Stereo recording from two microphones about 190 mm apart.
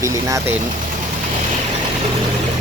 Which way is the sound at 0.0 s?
15° right (ahead or behind).